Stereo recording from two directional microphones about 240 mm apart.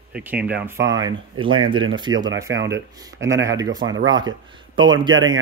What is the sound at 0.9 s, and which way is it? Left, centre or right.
Speech, centre.